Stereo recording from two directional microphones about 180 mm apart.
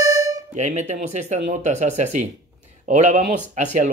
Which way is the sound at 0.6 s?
40° right (ahead or behind).